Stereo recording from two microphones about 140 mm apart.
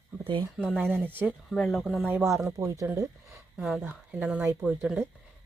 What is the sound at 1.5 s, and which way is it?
Speech, centre (ahead or behind).